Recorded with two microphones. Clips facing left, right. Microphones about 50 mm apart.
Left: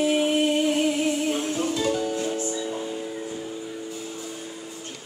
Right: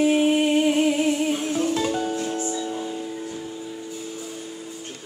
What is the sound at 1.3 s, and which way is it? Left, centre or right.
Music, centre.